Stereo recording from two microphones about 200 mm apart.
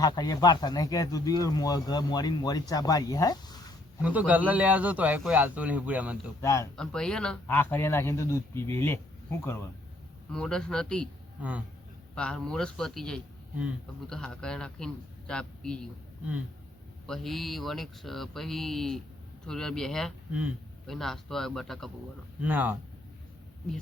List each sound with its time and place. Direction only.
0.0 s speech: 20° left (ahead or behind)
4.0 s speech: 5° right (ahead or behind)
6.4 s speech: 15° left (ahead or behind)
6.7 s speech: 5° left (ahead or behind)
11.3 s speech: 5° right (ahead or behind)
12.1 s speech: 5° left (ahead or behind)
17.1 s speech: centre (ahead or behind)